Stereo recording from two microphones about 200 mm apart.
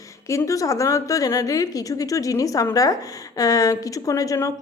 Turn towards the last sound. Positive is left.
turn(degrees=15)  # may be behind; listen again after turning